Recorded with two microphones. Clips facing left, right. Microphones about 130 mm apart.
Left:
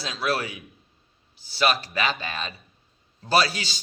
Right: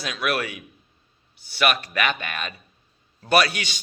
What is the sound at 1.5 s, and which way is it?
A man's voice, 30° left (ahead or behind).